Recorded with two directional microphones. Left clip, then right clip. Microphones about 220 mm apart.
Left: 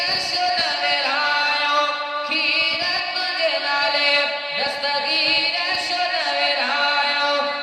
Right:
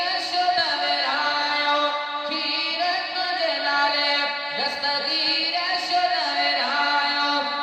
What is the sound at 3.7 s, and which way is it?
Chant, 45° right (ahead or behind).